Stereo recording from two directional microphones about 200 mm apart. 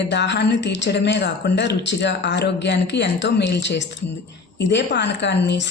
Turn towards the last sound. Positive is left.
turn(degrees=60)  # may be behind; listen again after turning